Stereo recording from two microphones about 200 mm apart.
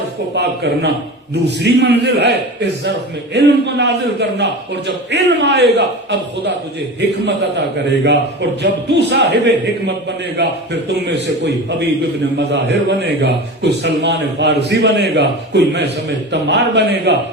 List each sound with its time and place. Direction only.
0.3 s a man's voice: 55° right (ahead or behind)